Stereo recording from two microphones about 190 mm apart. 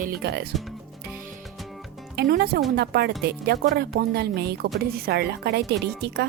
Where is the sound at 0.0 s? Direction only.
60° right (ahead or behind).